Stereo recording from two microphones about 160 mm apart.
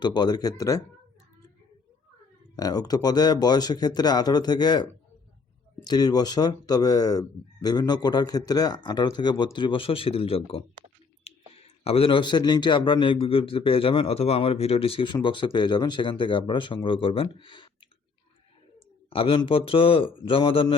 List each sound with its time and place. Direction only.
0.0 s speech: 25° left (ahead or behind)
2.6 s speech: 25° left (ahead or behind)
11.3 s clicking: 40° left (ahead or behind)
11.8 s a man's voice: 35° left (ahead or behind)
19.1 s a man's voice: 35° left (ahead or behind)